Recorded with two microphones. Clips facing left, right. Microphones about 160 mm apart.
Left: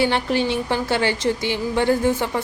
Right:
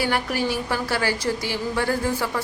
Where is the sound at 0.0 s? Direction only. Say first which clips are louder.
Left 4 dB; 25° left (ahead or behind).